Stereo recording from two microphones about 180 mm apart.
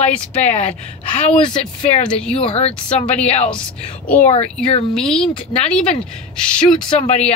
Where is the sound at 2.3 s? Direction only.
35° left (ahead or behind).